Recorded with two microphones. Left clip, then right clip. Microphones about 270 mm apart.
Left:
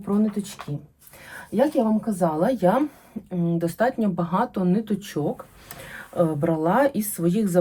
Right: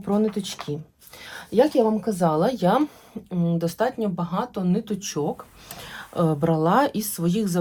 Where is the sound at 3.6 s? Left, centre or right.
Centre.